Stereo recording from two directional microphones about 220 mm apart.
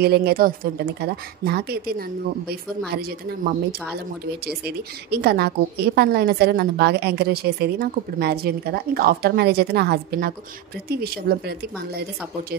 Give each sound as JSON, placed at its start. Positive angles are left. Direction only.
{"t": 0.0, "sound": "a woman's voice", "side_deg": -45}